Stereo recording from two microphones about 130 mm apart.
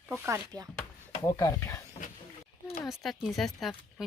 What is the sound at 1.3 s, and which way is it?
Speech, 25° left (ahead or behind).